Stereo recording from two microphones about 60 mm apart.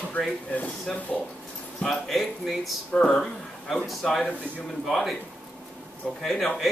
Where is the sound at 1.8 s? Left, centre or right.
Centre.